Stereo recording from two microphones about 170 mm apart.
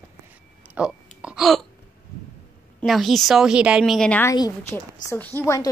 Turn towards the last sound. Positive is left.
turn(degrees=20)  # may be behind; listen again after turning